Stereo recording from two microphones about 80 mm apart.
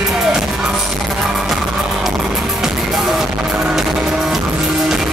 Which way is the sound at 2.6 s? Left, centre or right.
Centre.